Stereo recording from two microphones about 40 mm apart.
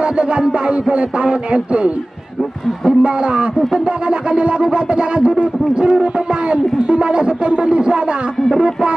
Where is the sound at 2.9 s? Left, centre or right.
Right.